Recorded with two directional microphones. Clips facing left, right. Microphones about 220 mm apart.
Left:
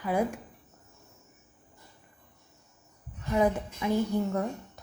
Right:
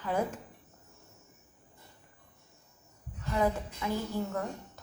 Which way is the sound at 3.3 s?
20° left (ahead or behind).